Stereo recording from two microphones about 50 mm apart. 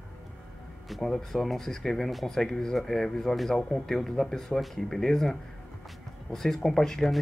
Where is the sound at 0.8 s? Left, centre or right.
Centre.